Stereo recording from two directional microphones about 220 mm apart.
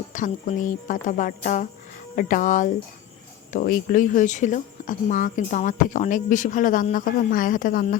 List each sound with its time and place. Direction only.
0.1 s speech: 35° left (ahead or behind)